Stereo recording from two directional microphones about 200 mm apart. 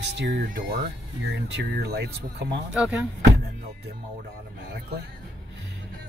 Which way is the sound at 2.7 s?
5° right (ahead or behind).